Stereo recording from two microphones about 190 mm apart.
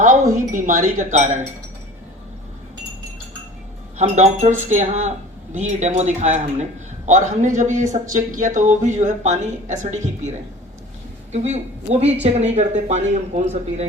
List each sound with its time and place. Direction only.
0.3 s speech: 45° right (ahead or behind)
3.9 s speech: 35° right (ahead or behind)
11.3 s speech: 35° right (ahead or behind)